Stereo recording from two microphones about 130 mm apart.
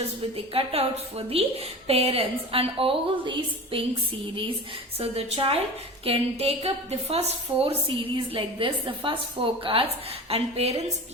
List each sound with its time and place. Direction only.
0.3 s a woman's voice: 50° right (ahead or behind)
4.9 s a woman's voice: 50° right (ahead or behind)